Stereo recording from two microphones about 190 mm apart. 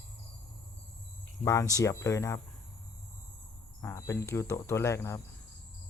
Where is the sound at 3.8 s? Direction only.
15° left (ahead or behind).